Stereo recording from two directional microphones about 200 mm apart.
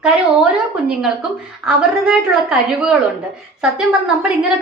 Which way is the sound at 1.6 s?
5° right (ahead or behind).